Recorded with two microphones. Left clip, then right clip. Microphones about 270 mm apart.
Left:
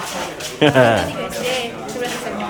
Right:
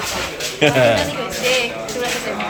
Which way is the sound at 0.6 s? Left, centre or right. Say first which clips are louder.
Left 1 dB; centre.